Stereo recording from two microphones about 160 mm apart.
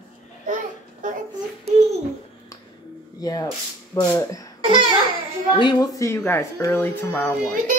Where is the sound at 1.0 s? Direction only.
55° right (ahead or behind).